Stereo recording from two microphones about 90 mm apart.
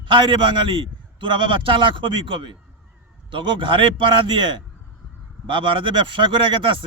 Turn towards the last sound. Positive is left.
turn(degrees=-65)  # may be behind; listen again after turning